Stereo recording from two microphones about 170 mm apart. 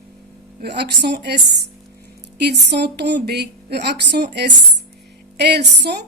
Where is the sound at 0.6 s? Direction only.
75° right (ahead or behind).